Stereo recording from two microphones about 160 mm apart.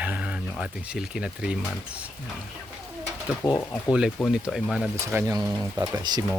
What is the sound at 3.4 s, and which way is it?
Speech, 15° left (ahead or behind).